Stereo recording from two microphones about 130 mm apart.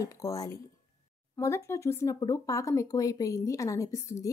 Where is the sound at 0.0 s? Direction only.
25° left (ahead or behind).